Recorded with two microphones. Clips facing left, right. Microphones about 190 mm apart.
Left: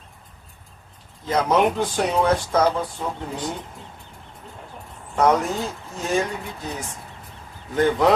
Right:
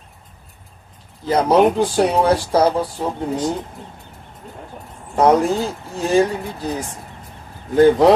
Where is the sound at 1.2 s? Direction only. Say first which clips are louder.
Right 5 dB; 35° right (ahead or behind).